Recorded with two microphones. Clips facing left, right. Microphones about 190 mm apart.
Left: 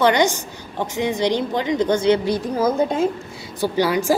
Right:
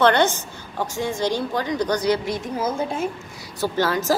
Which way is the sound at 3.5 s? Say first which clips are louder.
Left 3 dB; 15° left (ahead or behind).